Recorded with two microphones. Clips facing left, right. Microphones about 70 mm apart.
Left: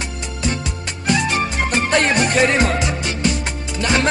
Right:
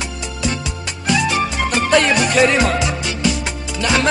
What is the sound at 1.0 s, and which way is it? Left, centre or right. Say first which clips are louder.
Music: right 1 dB; left.